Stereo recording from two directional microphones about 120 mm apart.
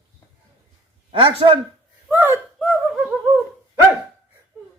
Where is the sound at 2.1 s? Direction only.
15° right (ahead or behind).